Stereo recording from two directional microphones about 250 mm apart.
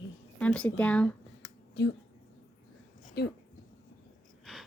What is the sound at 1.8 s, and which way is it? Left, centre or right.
Speech, left.